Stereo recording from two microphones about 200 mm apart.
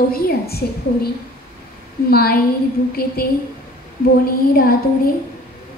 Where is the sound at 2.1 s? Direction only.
50° left (ahead or behind).